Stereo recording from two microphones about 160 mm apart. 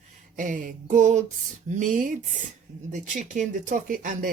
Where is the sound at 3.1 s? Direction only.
50° right (ahead or behind).